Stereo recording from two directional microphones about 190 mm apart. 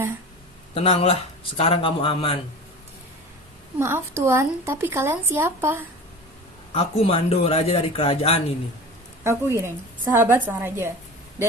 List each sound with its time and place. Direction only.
0.7 s speech: 30° left (ahead or behind)
3.8 s speech: 15° right (ahead or behind)
6.7 s a man's voice: 30° left (ahead or behind)
9.2 s speech: 15° right (ahead or behind)